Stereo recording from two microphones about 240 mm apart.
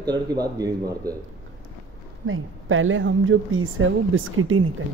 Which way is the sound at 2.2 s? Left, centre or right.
Right.